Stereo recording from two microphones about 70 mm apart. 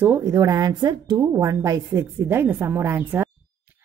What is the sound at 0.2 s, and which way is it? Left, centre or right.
Speech, right.